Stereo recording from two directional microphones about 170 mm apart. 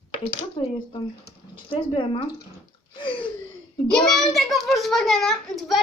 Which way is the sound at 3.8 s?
5° left (ahead or behind).